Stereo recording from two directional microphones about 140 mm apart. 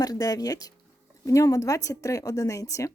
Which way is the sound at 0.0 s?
25° left (ahead or behind).